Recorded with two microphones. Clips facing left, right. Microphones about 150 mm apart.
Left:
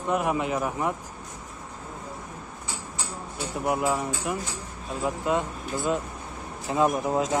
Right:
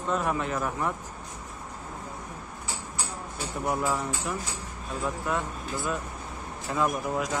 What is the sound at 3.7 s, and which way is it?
Speech, 15° left (ahead or behind).